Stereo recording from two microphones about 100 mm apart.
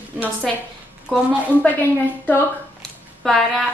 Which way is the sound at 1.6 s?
15° left (ahead or behind).